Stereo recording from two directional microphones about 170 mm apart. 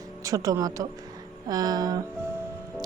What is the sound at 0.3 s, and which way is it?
A woman's voice, 20° right (ahead or behind).